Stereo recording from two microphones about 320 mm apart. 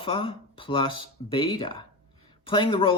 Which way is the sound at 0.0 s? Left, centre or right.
Centre.